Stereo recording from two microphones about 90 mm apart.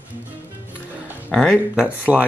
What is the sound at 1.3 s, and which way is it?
Speech, 5° left (ahead or behind).